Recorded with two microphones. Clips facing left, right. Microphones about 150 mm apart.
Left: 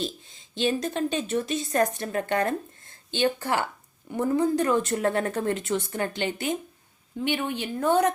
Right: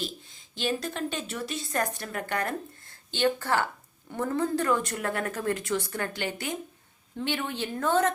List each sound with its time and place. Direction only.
0.0 s a woman's voice: 20° left (ahead or behind)